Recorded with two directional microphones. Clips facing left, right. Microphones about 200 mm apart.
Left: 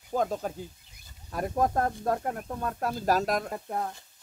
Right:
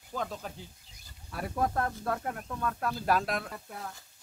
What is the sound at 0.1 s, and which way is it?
Speech, 45° left (ahead or behind).